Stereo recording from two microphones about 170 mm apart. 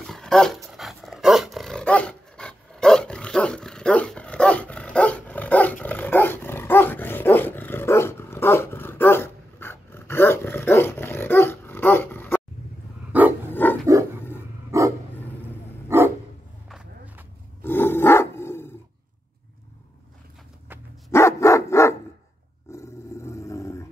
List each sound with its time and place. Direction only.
0.0 s dog: 5° left (ahead or behind)
13.1 s dog: 10° right (ahead or behind)
13.5 s a sound: 10° left (ahead or behind)
13.8 s a sound: 20° right (ahead or behind)
14.7 s dog: 20° right (ahead or behind)
16.6 s a sound: 5° right (ahead or behind)
17.6 s roar: 15° left (ahead or behind)
21.1 s dog: 15° left (ahead or behind)
22.7 s roar: 15° left (ahead or behind)